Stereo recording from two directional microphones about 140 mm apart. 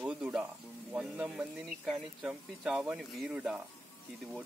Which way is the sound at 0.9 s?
5° right (ahead or behind).